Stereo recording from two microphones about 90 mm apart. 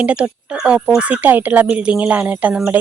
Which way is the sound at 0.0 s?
10° right (ahead or behind).